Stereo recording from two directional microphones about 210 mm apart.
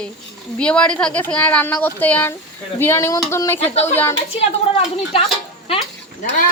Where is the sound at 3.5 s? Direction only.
30° left (ahead or behind).